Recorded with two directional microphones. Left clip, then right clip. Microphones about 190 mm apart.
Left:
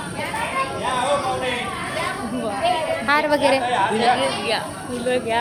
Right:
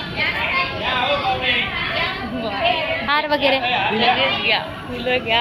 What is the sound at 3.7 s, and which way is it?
Speech, 40° left (ahead or behind).